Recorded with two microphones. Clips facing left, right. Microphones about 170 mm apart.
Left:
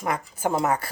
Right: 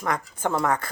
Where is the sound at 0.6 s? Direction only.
30° left (ahead or behind).